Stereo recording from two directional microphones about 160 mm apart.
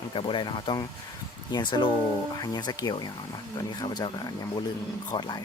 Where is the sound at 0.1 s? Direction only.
30° left (ahead or behind).